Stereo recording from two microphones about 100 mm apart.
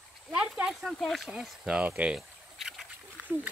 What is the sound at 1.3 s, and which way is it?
Speech, 5° right (ahead or behind).